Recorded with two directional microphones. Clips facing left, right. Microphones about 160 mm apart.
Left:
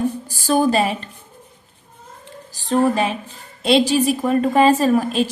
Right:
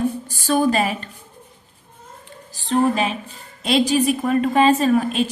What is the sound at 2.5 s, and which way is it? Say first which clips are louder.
A woman's voice: left 1 dB; 40° left (ahead or behind).